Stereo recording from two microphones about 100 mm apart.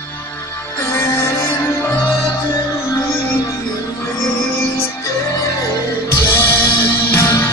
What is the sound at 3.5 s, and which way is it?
Music, 30° left (ahead or behind).